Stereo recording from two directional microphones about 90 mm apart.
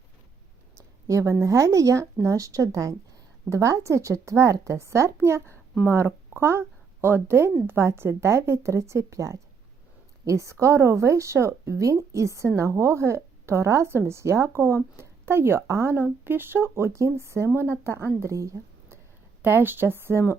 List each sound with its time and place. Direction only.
1.0 s speech: 35° right (ahead or behind)
19.4 s speech: 25° right (ahead or behind)